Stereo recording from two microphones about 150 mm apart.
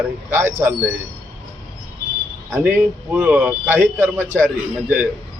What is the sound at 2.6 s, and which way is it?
A man's voice, 10° right (ahead or behind).